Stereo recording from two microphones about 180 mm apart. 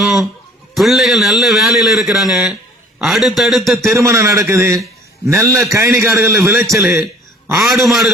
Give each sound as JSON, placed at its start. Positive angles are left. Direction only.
{"t": 0.0, "sound": "a sound", "side_deg": 0}
{"t": 0.7, "sound": "a man's voice", "side_deg": 0}
{"t": 3.9, "sound": "a man's voice", "side_deg": -15}
{"t": 7.6, "sound": "a man's voice", "side_deg": 0}